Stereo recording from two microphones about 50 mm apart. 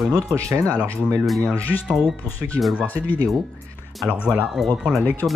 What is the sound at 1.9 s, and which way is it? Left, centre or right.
Speech, centre.